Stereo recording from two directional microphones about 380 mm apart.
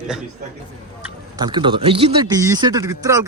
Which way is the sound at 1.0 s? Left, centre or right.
Centre.